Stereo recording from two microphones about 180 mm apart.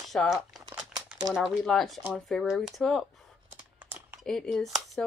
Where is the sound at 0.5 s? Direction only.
5° right (ahead or behind).